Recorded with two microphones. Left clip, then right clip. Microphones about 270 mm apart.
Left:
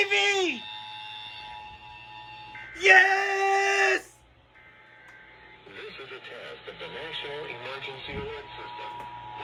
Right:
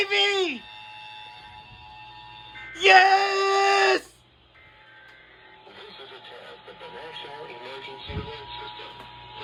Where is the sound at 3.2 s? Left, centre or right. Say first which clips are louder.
Right 3 dB; centre.